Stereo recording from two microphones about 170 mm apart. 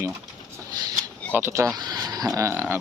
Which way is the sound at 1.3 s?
15° right (ahead or behind).